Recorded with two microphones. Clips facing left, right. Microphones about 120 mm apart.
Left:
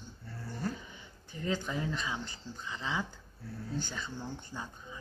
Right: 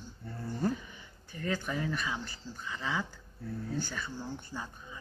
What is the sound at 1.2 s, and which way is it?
Speech, 20° left (ahead or behind).